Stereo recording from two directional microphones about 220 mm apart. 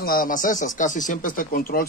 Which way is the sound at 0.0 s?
40° left (ahead or behind).